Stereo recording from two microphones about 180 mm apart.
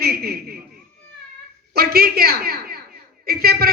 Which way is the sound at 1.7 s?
60° right (ahead or behind).